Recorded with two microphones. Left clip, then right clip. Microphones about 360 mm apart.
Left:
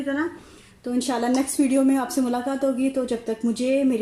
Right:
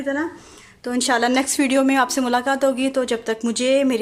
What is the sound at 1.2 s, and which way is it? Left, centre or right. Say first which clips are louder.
Speech: right 3 dB; right.